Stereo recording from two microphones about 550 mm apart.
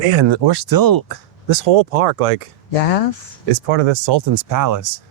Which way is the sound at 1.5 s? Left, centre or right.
Right.